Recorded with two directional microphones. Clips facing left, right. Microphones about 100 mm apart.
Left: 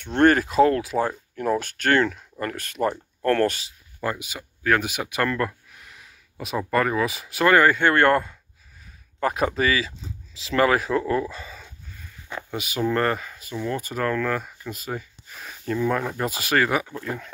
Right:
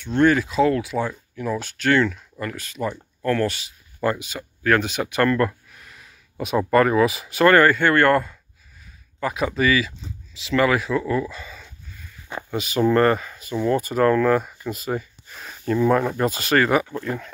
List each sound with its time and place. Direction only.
0.0 s speech: 55° left (ahead or behind)
4.0 s speech: 10° left (ahead or behind)
5.8 s a sound: 10° left (ahead or behind)
6.7 s speech: centre (ahead or behind); by 8.3 s 25° left (ahead or behind)
9.2 s speech: 45° left (ahead or behind)
12.4 s speech: 10° left (ahead or behind)
13.9 s speech: 20° right (ahead or behind)
15.3 s speech: centre (ahead or behind)
16.2 s speech: 10° left (ahead or behind)